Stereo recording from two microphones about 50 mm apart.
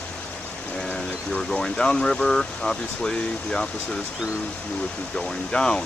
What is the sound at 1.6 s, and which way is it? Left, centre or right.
Speech, centre.